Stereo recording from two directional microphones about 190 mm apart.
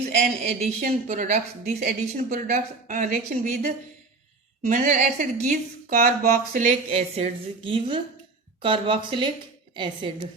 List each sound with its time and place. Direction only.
0.2 s a woman's voice: 40° right (ahead or behind)
6.9 s a woman's voice: 35° right (ahead or behind)